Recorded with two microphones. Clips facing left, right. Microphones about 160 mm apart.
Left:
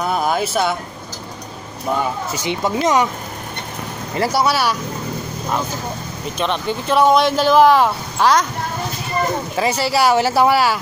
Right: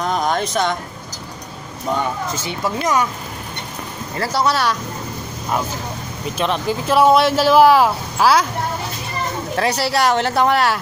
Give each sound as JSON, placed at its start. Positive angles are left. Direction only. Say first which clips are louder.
{"t": 0.0, "sound": "a sound", "louder": "left 1 dB", "side_deg": 5}
{"t": 2.0, "sound": "speech", "louder": "even", "side_deg": 15}
{"t": 4.2, "sound": "speech", "louder": "left 1 dB", "side_deg": 10}
{"t": 6.3, "sound": "speech", "louder": "right 1 dB", "side_deg": 0}
{"t": 9.6, "sound": "speech", "louder": "even", "side_deg": 0}